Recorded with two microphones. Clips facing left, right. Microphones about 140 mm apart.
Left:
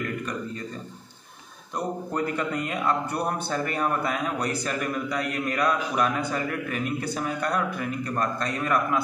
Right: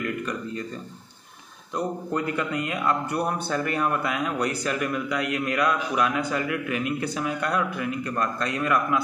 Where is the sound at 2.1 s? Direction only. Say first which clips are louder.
Even; 45° left (ahead or behind).